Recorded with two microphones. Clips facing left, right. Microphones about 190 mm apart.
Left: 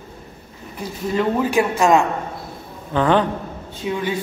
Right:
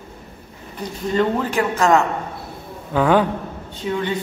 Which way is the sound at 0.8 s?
5° left (ahead or behind).